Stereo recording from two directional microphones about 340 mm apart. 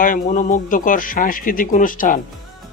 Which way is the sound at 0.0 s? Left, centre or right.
Left.